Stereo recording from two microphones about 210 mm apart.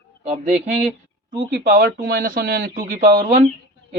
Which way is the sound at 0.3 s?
35° right (ahead or behind).